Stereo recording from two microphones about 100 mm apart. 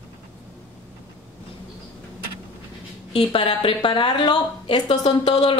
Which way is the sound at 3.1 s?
65° left (ahead or behind).